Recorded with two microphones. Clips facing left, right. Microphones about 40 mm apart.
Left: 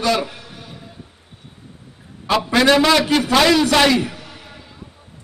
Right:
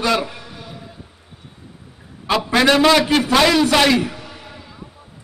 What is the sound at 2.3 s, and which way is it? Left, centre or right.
A man's voice, centre.